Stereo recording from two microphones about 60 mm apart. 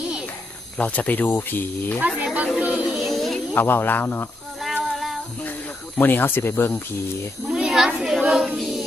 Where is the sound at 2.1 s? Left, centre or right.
Right.